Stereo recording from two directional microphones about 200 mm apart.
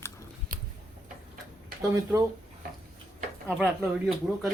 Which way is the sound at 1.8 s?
15° right (ahead or behind).